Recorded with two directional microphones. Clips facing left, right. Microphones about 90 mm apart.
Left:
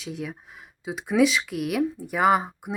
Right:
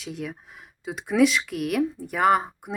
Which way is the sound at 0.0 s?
Centre (ahead or behind).